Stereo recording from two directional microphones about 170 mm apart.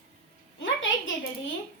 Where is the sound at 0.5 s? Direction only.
90° left.